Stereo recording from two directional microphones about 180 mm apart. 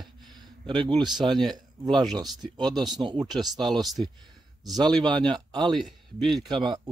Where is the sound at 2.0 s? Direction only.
20° right (ahead or behind).